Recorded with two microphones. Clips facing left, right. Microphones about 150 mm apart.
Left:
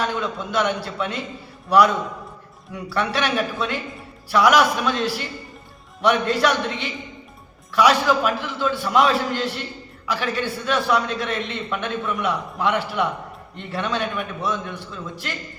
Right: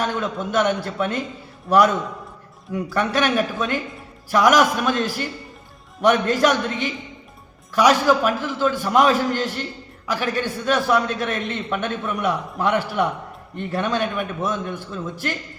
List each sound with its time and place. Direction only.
0.0 s a man's voice: 45° right (ahead or behind)
2.7 s a man's voice: 45° right (ahead or behind)